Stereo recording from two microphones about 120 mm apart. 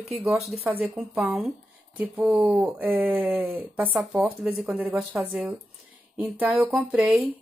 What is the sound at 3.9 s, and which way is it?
Speech, centre (ahead or behind).